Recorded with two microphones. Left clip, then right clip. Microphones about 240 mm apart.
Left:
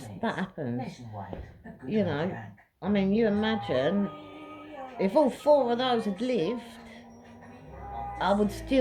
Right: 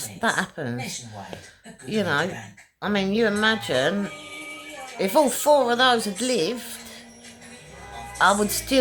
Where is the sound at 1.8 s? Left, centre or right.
Right.